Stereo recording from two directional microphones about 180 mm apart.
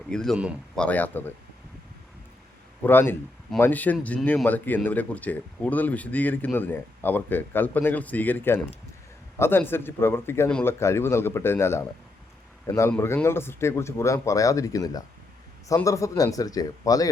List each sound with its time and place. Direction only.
0.1 s speech: 5° left (ahead or behind)
2.8 s speech: 10° left (ahead or behind)
12.9 s speech: 10° left (ahead or behind)